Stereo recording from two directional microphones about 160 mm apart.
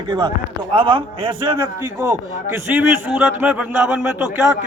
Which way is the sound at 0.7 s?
30° right (ahead or behind).